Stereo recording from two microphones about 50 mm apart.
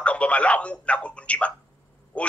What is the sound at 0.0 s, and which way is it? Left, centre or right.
A man's voice, left.